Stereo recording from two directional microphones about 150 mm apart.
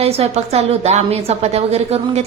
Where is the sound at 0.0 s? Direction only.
45° right (ahead or behind).